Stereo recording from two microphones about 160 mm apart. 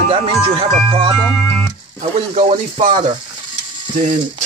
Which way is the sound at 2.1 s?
45° right (ahead or behind).